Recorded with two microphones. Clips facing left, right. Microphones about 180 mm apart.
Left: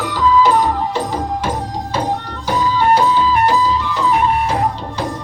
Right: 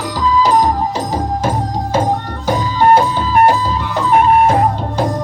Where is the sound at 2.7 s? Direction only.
50° right (ahead or behind).